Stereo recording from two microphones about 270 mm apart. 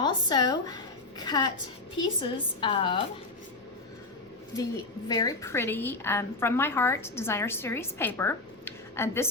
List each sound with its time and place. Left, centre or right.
0.0 s a woman's voice: centre
5.0 s a woman's voice: centre